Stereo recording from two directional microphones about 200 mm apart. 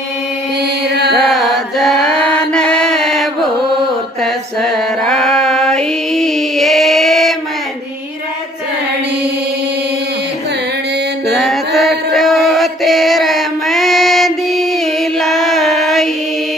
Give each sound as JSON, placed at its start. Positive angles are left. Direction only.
{"t": 0.8, "sound": "mantra", "side_deg": -55}
{"t": 1.3, "sound": "mantra", "side_deg": 0}
{"t": 4.2, "sound": "female singing", "side_deg": 0}
{"t": 11.2, "sound": "music", "side_deg": 0}